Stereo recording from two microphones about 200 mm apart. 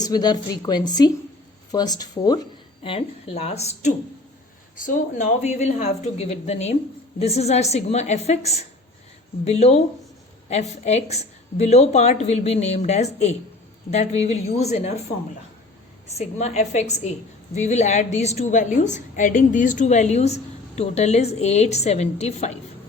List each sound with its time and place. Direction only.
0.0 s a woman's voice: 20° left (ahead or behind)
16.1 s a woman's voice: 35° left (ahead or behind)